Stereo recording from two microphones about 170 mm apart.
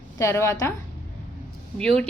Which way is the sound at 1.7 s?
5° left (ahead or behind).